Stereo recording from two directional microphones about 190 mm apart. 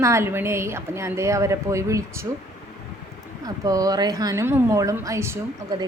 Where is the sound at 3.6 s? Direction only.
20° right (ahead or behind).